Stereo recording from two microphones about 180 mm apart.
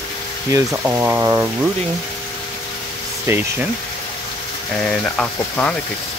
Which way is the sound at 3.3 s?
15° right (ahead or behind).